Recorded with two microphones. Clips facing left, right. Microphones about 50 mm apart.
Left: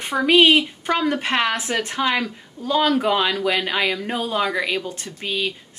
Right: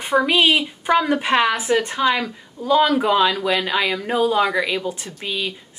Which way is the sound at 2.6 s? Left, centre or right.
Centre.